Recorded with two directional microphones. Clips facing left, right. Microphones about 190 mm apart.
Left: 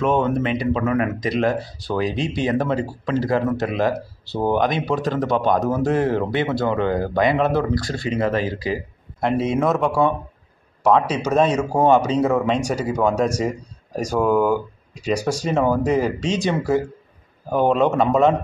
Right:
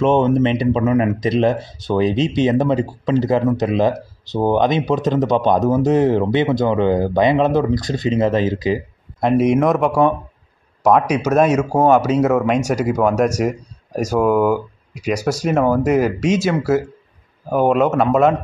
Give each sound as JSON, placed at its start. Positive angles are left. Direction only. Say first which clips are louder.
{"t": 0.0, "sound": "speech", "louder": "right 5 dB", "side_deg": -25}